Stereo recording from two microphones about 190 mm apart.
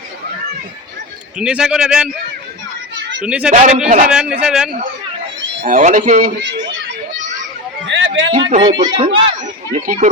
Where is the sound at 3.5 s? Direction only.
40° right (ahead or behind).